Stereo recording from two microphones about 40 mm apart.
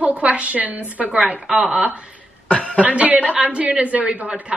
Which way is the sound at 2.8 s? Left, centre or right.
Right.